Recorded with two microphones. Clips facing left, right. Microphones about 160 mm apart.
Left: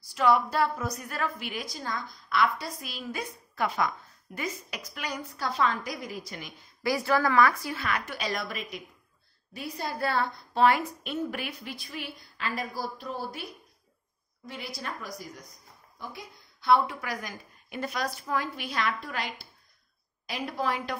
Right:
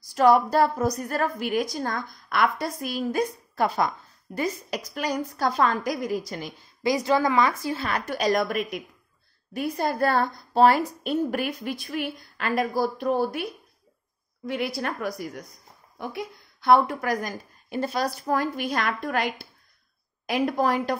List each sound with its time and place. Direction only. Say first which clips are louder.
0.0 s a woman's voice: right 6 dB; 45° right (ahead or behind)
6.8 s a woman's voice: right 4 dB; 20° right (ahead or behind); by 20.9 s 45° right (ahead or behind)